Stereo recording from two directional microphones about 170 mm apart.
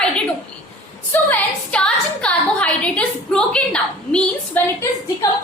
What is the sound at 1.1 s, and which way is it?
A woman's voice, 10° left (ahead or behind).